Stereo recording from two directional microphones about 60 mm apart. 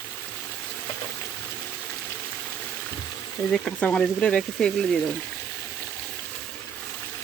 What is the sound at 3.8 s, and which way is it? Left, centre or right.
Speech, centre.